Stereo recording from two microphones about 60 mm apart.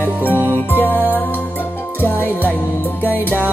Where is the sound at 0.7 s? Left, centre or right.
Left.